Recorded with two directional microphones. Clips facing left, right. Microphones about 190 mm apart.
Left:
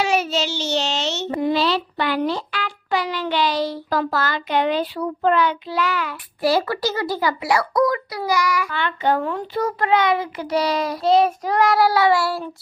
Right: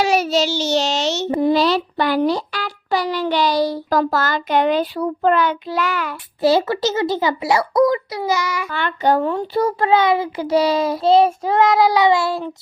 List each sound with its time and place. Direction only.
0.0 s child singing: 40° right (ahead or behind)
3.8 s a child's voice: 45° right (ahead or behind)
6.4 s a child's voice: 25° right (ahead or behind)
8.7 s a child's voice: 40° right (ahead or behind); by 12.5 s 20° right (ahead or behind)